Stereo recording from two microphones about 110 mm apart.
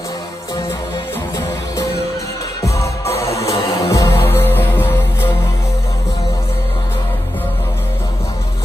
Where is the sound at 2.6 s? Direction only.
30° left (ahead or behind).